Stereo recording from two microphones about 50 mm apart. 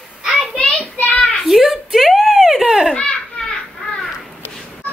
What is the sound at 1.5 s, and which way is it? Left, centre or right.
Baby laughter, centre.